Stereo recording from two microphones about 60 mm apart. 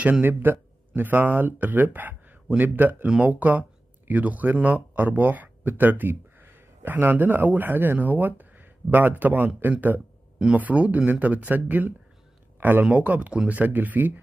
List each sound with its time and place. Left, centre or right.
0.2 s speech: right
12.5 s a sound: right
12.8 s speech: right